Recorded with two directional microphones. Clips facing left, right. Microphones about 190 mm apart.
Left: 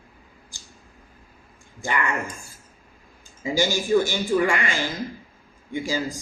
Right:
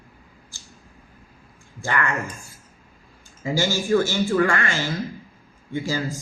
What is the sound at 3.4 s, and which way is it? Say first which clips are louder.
A man's voice: even; 15° left (ahead or behind).